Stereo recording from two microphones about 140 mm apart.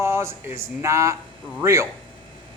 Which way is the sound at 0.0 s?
20° right (ahead or behind).